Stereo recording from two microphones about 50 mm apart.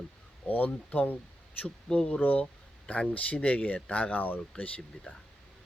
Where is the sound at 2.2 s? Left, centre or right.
Left.